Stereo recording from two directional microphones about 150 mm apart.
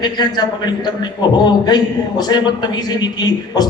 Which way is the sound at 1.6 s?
25° left (ahead or behind).